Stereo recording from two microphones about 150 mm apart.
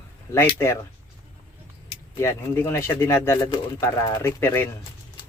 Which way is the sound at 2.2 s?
15° left (ahead or behind).